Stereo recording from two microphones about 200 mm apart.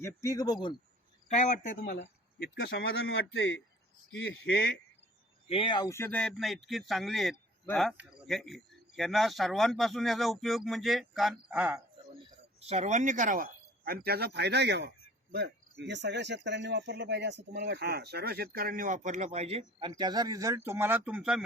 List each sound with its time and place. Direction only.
0.0 s speech: 15° left (ahead or behind)
1.3 s speech: 35° left (ahead or behind); by 4.5 s 70° left (ahead or behind)
4.5 s speech: 50° left (ahead or behind)
5.5 s speech: 25° left (ahead or behind); by 11.8 s 5° right (ahead or behind)
12.2 s speech: 30° right (ahead or behind)
19.9 s speech: 20° right (ahead or behind); by 21.4 s 5° right (ahead or behind)